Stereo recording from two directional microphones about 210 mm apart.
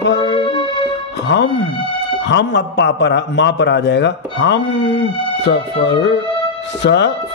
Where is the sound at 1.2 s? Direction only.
55° left (ahead or behind).